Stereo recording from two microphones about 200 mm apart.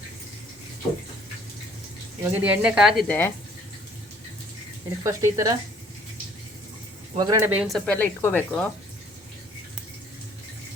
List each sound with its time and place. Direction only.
2.4 s speech: 5° right (ahead or behind)
5.0 s speech: 15° right (ahead or behind)
7.2 s speech: 15° right (ahead or behind)
7.9 s speech: 10° left (ahead or behind)